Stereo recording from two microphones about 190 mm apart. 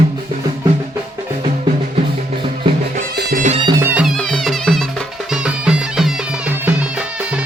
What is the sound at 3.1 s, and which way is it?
Music, 50° right (ahead or behind).